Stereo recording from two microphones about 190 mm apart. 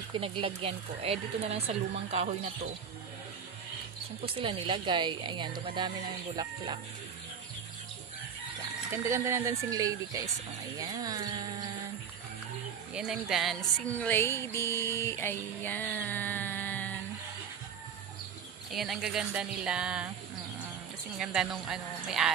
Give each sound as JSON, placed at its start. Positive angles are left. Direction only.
{"t": 0.1, "sound": "speech", "side_deg": -25}
{"t": 4.2, "sound": "a woman's voice", "side_deg": -30}
{"t": 8.9, "sound": "speech", "side_deg": -15}
{"t": 10.8, "sound": "a sound", "side_deg": -20}
{"t": 12.9, "sound": "speech", "side_deg": -5}
{"t": 13.9, "sound": "music", "side_deg": 10}
{"t": 18.7, "sound": "speech", "side_deg": 0}
{"t": 21.2, "sound": "speech", "side_deg": -5}